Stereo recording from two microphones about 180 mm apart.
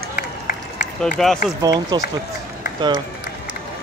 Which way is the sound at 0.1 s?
45° left (ahead or behind).